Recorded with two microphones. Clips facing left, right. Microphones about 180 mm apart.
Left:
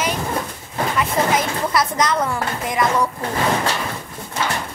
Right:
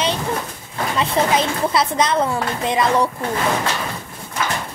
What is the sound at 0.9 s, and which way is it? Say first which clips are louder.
Speech: right 2 dB; 25° right (ahead or behind).